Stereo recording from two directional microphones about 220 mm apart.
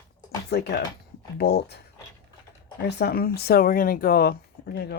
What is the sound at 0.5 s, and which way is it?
Speech, 50° left (ahead or behind).